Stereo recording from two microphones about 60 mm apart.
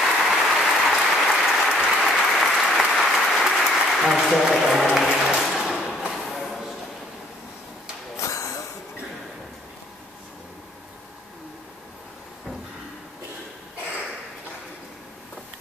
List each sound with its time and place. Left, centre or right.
0.0 s applause: centre
5.4 s thump: centre
8.2 s a sound: left